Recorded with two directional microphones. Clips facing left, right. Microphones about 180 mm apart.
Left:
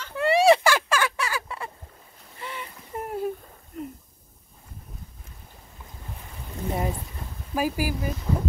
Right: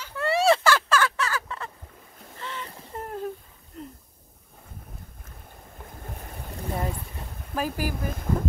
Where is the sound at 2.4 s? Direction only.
10° left (ahead or behind).